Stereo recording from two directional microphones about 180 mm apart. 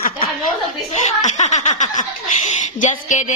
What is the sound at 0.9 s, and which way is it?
Speech, 40° left (ahead or behind).